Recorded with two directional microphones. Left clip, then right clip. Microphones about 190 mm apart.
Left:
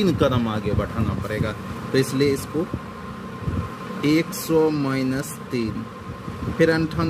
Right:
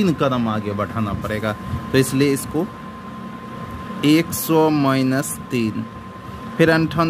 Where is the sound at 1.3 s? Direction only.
45° right (ahead or behind).